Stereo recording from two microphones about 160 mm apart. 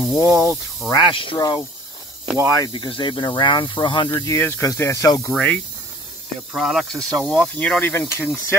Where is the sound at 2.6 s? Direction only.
30° left (ahead or behind).